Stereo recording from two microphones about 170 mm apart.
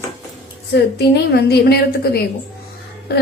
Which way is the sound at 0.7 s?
75° left (ahead or behind).